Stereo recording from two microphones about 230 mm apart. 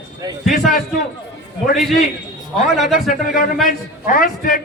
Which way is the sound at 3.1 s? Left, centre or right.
Left.